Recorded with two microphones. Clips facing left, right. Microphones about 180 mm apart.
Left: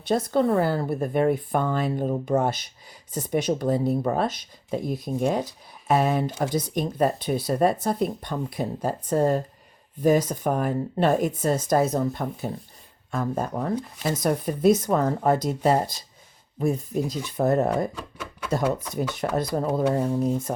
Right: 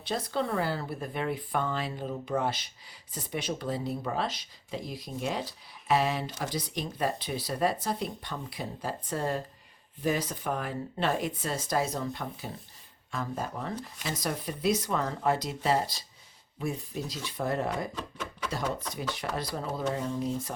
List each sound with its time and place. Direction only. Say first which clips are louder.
0.1 s speech: left 9 dB; 45° left (ahead or behind)
17.9 s a sound: left 1 dB; 10° left (ahead or behind)
18.6 s speech: left 7 dB; 5° left (ahead or behind)
19.2 s speech: left 11 dB; 45° left (ahead or behind)